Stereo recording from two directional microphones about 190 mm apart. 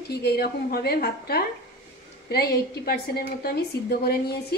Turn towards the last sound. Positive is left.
turn(degrees=55)  # may be behind; listen again after turning